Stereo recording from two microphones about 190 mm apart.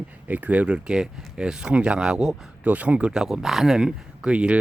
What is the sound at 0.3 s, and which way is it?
Speech, 10° right (ahead or behind).